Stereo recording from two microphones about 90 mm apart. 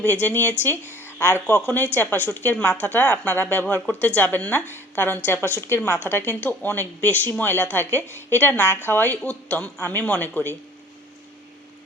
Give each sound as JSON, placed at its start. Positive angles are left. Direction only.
{"t": 0.0, "sound": "speech", "side_deg": 15}
{"t": 1.5, "sound": "a woman's voice", "side_deg": 15}